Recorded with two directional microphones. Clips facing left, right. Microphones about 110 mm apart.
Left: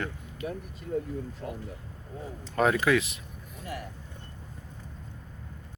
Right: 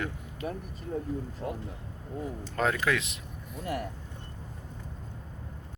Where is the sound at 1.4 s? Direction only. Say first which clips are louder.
Right 5 dB; 30° right (ahead or behind).